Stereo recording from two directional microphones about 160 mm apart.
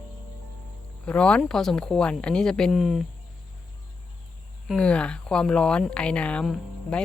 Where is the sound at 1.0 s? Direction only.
5° left (ahead or behind).